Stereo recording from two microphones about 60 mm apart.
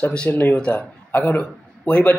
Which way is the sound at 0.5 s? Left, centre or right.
Centre.